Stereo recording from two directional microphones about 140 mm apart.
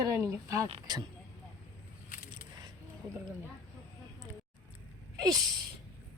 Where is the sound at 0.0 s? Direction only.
20° right (ahead or behind).